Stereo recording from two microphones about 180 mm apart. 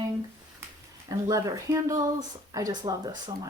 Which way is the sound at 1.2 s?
20° right (ahead or behind).